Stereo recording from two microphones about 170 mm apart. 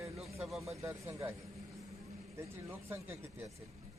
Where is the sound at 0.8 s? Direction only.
15° right (ahead or behind).